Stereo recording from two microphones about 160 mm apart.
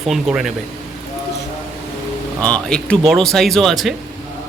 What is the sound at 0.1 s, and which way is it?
Speech, 5° right (ahead or behind).